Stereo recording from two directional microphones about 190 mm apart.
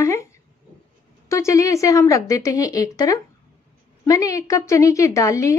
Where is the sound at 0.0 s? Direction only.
15° left (ahead or behind).